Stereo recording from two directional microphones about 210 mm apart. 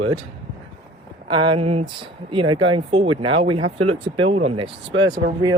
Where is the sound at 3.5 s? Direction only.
90° right.